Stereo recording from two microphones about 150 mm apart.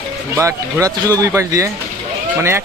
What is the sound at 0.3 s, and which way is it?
Speech, 20° right (ahead or behind).